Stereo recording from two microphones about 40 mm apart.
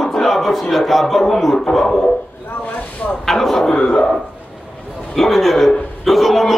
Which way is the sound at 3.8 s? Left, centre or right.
Left.